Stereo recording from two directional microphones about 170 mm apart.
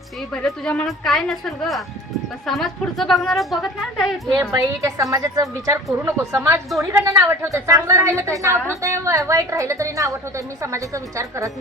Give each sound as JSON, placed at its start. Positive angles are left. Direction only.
{"t": 0.4, "sound": "a woman's voice", "side_deg": 5}
{"t": 4.4, "sound": "a woman's voice", "side_deg": -20}